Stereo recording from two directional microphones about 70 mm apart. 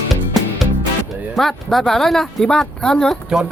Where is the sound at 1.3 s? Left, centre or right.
Centre.